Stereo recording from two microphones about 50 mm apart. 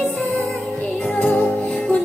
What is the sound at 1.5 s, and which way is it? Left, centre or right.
Music, left.